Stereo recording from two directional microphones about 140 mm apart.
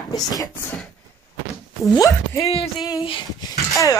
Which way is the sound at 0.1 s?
25° left (ahead or behind).